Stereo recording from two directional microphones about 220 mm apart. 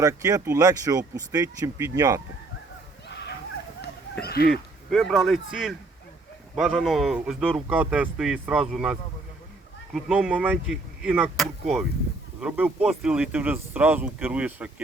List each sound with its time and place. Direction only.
0.0 s speech: 15° right (ahead or behind)
3.1 s a sound: 50° left (ahead or behind)
4.2 s speech: 45° left (ahead or behind)
4.5 s speech: centre (ahead or behind)